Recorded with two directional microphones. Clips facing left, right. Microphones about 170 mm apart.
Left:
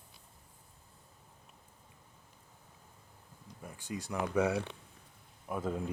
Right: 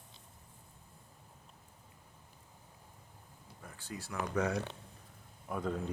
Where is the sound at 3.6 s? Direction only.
15° left (ahead or behind).